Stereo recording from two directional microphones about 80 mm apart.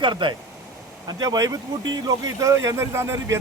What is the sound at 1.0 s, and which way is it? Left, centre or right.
Speech, right.